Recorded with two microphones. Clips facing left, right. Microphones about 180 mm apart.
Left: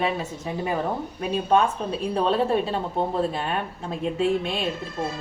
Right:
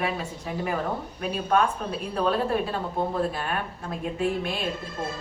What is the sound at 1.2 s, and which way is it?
A woman's voice, 20° left (ahead or behind).